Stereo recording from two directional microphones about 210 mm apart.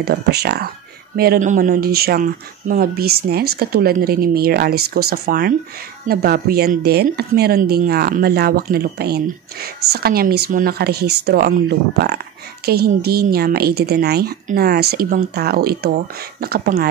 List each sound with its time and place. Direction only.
0.0 s a woman's voice: 50° right (ahead or behind)